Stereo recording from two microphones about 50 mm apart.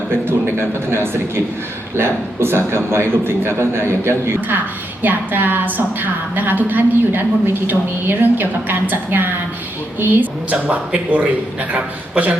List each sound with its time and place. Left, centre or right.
0.3 s a man's voice: right
4.4 s a woman's voice: right